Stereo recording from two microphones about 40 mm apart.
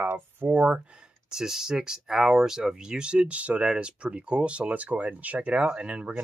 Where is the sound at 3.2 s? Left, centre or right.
Right.